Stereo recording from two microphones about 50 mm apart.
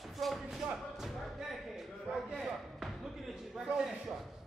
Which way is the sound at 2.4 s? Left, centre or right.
Centre.